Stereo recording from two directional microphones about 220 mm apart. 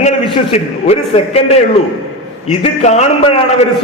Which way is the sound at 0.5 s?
30° left (ahead or behind).